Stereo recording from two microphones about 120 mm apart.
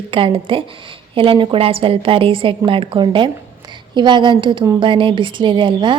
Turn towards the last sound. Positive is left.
turn(degrees=-40)  # may be behind; listen again after turning